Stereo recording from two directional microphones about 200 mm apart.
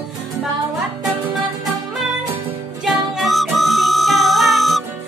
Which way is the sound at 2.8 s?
Centre (ahead or behind).